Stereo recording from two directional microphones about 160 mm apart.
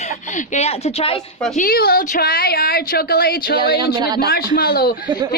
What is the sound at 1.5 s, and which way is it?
Speech, 65° left (ahead or behind).